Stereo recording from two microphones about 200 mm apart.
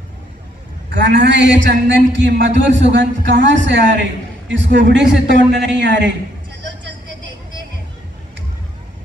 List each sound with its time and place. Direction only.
0.8 s a man's voice: 60° right (ahead or behind)